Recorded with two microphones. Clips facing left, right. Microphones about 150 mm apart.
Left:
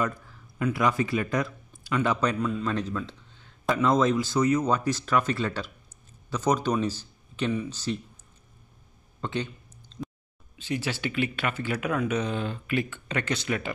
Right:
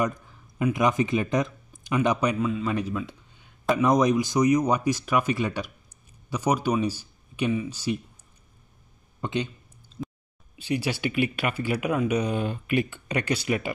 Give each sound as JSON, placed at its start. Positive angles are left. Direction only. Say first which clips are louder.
{"t": 0.0, "sound": "speech", "louder": "right 2 dB", "side_deg": -15}
{"t": 9.2, "sound": "a sound", "louder": "right 2 dB", "side_deg": -15}
{"t": 10.6, "sound": "speech", "louder": "right 3 dB", "side_deg": -15}